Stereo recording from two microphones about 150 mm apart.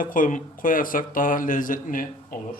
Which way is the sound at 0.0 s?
65° left (ahead or behind).